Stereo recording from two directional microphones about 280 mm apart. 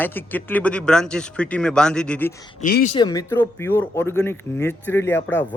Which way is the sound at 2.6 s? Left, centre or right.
Left.